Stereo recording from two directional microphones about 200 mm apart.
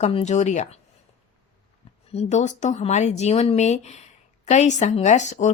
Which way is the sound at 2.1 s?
35° left (ahead or behind).